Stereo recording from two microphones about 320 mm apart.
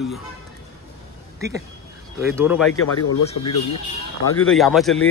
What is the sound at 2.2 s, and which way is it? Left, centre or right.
Speech, centre.